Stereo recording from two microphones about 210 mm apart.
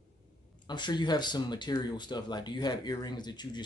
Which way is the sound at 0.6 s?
20° left (ahead or behind).